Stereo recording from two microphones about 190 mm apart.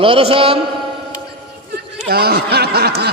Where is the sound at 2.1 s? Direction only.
55° right (ahead or behind).